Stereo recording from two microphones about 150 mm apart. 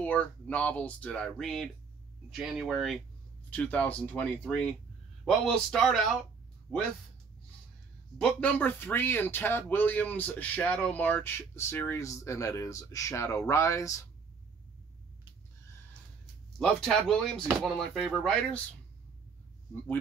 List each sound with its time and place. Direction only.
0.0 s speech: 10° left (ahead or behind)
3.4 s speech: 10° left (ahead or behind)
8.2 s speech: 5° left (ahead or behind); by 14.0 s 20° left (ahead or behind)
16.5 s speech: 5° left (ahead or behind)